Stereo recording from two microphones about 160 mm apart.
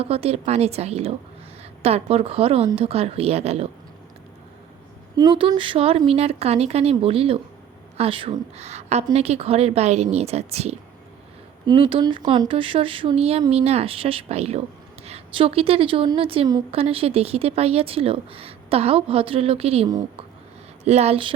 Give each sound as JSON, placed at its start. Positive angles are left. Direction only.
{"t": 0.0, "sound": "speech", "side_deg": -40}
{"t": 5.1, "sound": "speech", "side_deg": -25}
{"t": 11.6, "sound": "speech", "side_deg": -30}
{"t": 19.9, "sound": "speech", "side_deg": -25}
{"t": 20.8, "sound": "speech", "side_deg": -40}